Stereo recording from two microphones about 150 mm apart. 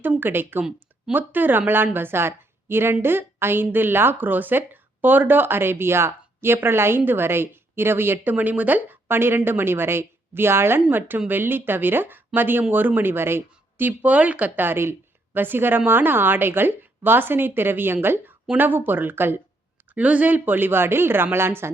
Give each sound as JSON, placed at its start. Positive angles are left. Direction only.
{"t": 0.0, "sound": "a woman's voice", "side_deg": -15}